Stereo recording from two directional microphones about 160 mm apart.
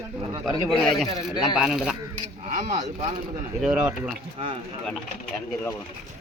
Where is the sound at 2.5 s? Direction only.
50° right (ahead or behind).